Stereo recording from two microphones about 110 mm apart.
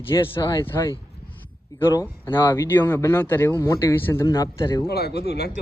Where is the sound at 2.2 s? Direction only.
25° left (ahead or behind).